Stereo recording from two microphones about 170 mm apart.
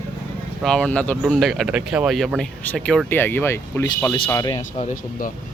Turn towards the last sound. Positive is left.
turn(degrees=55)  # may be behind; listen again after turning